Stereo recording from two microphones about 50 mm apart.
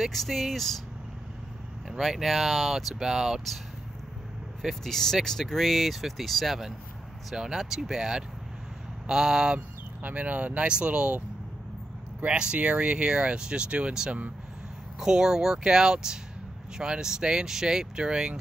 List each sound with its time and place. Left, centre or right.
0.0 s speech: centre
1.9 s speech: centre
4.6 s speech: centre
10.0 s speech: right
12.3 s speech: centre
15.0 s speech: centre